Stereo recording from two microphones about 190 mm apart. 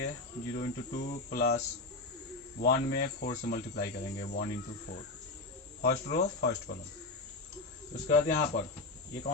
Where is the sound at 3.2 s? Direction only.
45° left (ahead or behind).